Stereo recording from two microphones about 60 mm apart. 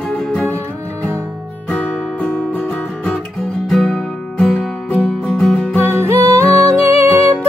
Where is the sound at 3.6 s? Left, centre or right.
Centre.